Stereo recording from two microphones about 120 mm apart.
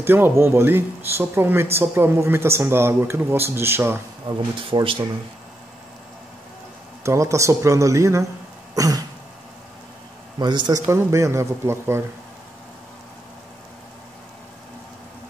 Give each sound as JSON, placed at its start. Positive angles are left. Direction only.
{"t": 0.0, "sound": "speech", "side_deg": -20}
{"t": 4.3, "sound": "speech", "side_deg": -45}
{"t": 7.0, "sound": "speech", "side_deg": -25}
{"t": 8.7, "sound": "throat clearing", "side_deg": -30}
{"t": 10.4, "sound": "a man's voice", "side_deg": -40}
{"t": 10.9, "sound": "speech", "side_deg": -25}